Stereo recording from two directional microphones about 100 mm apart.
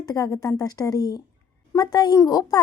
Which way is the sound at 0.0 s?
40° left (ahead or behind).